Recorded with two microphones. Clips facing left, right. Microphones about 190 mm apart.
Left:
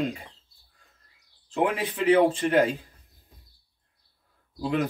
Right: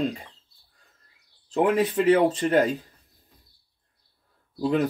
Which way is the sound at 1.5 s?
40° right (ahead or behind).